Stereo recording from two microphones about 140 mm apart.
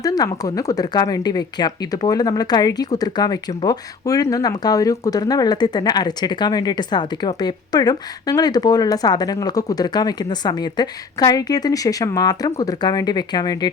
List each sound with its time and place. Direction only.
0.0 s speech: 25° left (ahead or behind)